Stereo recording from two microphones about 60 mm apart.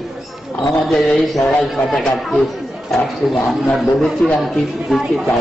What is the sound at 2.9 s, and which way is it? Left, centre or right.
Speech, centre.